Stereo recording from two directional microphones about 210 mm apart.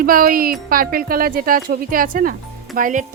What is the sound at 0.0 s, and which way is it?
Speech, 45° right (ahead or behind).